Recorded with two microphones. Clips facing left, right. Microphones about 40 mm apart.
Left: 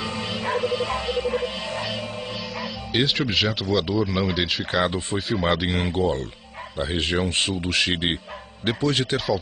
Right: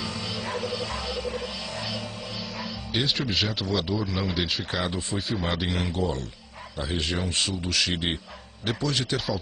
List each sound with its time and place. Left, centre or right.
0.0 s music: left
2.3 s speech: centre
4.6 s speech: left